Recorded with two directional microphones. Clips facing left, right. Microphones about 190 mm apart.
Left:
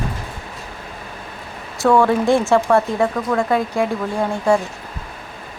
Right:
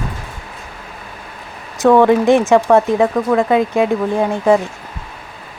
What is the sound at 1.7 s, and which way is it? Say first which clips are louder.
Speech: right 5 dB; 20° right (ahead or behind).